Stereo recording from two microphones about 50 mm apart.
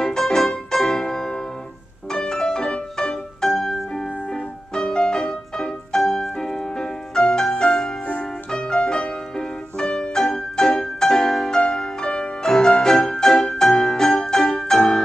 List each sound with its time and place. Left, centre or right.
0.0 s music: centre
2.1 s piano: centre
4.8 s music: centre